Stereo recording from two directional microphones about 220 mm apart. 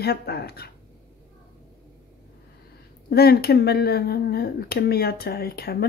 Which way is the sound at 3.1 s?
45° left (ahead or behind).